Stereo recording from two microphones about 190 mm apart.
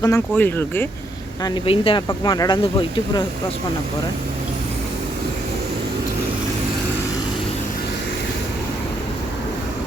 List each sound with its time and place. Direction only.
0.0 s speech: 15° left (ahead or behind)
1.5 s speech: 30° left (ahead or behind)